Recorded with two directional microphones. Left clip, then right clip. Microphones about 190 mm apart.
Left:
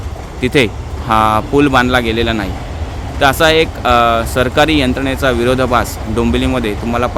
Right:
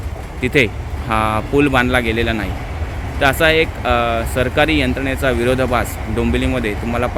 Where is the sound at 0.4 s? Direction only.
15° left (ahead or behind).